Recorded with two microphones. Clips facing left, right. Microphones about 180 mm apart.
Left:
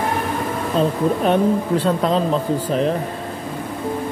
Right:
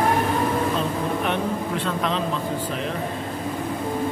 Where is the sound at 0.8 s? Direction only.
35° left (ahead or behind).